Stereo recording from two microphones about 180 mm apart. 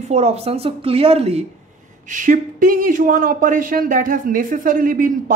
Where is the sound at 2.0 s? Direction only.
45° right (ahead or behind).